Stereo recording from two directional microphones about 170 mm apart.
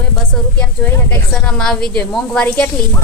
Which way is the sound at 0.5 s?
10° left (ahead or behind).